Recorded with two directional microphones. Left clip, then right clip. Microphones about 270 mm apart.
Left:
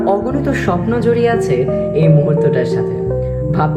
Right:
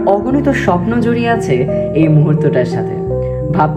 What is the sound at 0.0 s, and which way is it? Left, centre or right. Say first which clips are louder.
Speech: right 3 dB; right.